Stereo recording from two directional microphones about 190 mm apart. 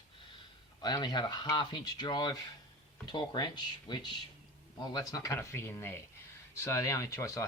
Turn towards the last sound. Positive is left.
turn(degrees=15)  # may be behind; listen again after turning